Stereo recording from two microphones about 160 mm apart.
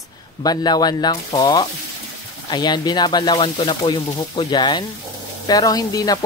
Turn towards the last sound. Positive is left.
turn(degrees=25)  # may be behind; listen again after turning